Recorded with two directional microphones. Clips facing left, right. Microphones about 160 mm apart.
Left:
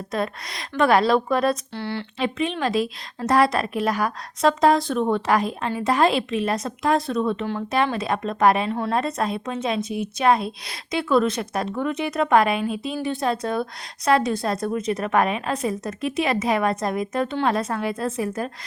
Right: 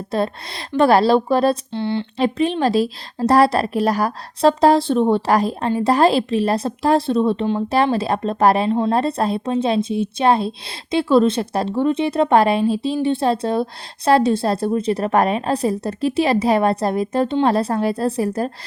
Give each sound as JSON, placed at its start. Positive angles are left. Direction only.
{"t": 0.1, "sound": "a woman's voice", "side_deg": -30}
{"t": 2.1, "sound": "a woman's voice", "side_deg": -35}